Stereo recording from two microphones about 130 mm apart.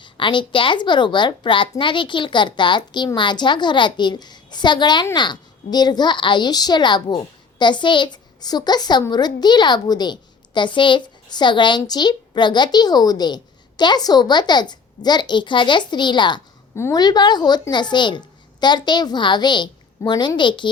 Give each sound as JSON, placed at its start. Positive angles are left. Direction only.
{"t": 0.0, "sound": "a woman's voice", "side_deg": 40}
{"t": 16.7, "sound": "a woman's voice", "side_deg": 20}
{"t": 17.0, "sound": "a woman's voice", "side_deg": 30}